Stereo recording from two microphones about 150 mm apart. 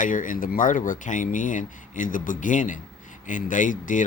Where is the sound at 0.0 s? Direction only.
60° left (ahead or behind).